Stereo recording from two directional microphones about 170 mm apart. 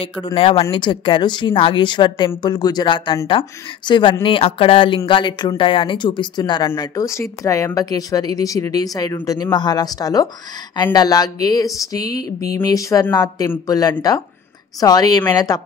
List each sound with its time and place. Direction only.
0.0 s speech: 30° left (ahead or behind)